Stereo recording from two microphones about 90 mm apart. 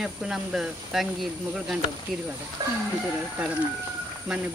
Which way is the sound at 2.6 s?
45° right (ahead or behind).